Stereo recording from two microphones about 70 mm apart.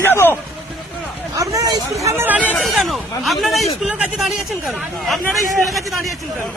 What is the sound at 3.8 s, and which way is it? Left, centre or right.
Speech, centre.